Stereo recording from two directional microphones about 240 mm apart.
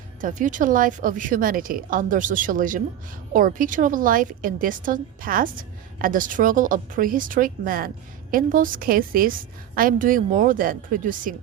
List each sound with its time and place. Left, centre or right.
0.2 s a woman's voice: right